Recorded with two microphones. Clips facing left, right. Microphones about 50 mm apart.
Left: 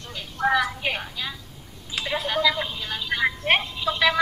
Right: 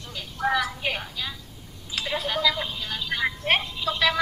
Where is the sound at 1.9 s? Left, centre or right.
Centre.